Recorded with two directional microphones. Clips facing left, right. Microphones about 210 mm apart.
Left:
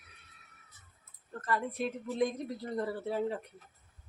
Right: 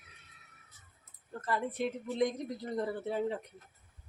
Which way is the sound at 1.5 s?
25° right (ahead or behind).